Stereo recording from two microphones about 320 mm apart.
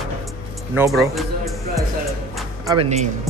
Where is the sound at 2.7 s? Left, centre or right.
Centre.